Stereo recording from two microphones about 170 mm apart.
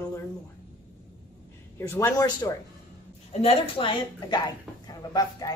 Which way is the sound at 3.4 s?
35° left (ahead or behind).